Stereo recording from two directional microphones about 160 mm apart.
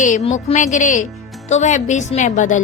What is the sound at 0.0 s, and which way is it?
Speech, 45° left (ahead or behind).